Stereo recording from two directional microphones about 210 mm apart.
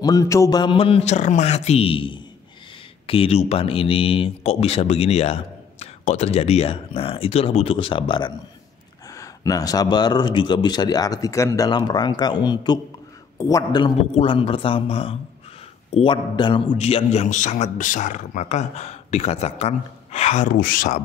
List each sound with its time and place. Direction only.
0.0 s a man's voice: 15° left (ahead or behind); by 21.0 s 40° left (ahead or behind)